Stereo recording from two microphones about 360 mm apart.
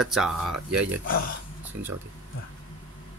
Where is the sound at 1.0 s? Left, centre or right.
Left.